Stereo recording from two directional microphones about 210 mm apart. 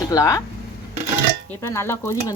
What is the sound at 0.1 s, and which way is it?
Speech, 15° left (ahead or behind).